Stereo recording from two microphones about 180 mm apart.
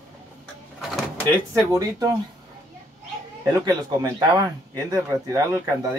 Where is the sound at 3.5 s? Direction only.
20° right (ahead or behind).